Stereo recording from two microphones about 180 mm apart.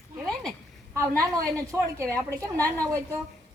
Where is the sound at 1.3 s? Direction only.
15° right (ahead or behind).